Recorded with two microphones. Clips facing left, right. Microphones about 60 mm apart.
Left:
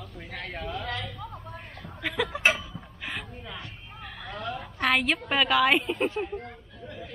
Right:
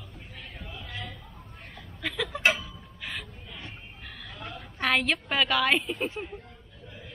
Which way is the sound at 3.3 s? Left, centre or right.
Left.